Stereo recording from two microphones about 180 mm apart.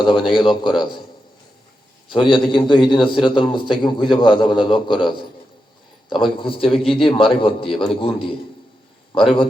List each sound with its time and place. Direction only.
0.0 s a man's voice: 25° left (ahead or behind)
2.0 s a man's voice: 25° left (ahead or behind)